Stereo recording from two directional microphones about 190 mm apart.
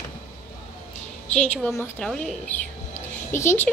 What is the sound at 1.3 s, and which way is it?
A woman's voice, 5° left (ahead or behind).